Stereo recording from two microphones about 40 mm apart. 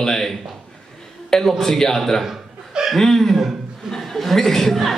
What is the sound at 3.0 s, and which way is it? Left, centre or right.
Speech, centre.